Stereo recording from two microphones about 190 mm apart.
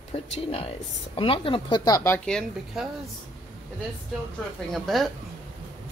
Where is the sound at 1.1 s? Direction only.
30° left (ahead or behind); by 2.9 s 5° left (ahead or behind).